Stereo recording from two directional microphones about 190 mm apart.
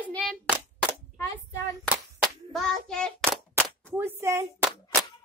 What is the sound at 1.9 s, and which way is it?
Child singing, centre (ahead or behind).